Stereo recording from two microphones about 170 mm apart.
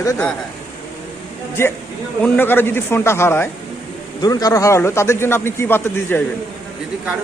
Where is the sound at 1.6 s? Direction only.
15° left (ahead or behind).